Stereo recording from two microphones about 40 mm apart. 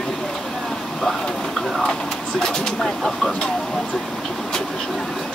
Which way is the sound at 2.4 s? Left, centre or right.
Centre.